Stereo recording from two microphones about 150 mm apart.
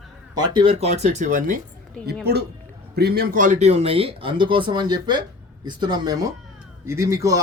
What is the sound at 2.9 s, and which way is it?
A man's voice, 90° right.